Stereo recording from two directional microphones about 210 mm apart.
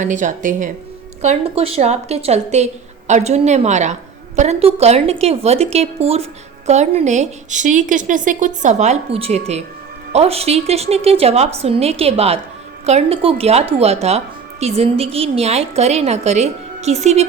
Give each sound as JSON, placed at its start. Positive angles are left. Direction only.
{"t": 0.0, "sound": "a woman's voice", "side_deg": -35}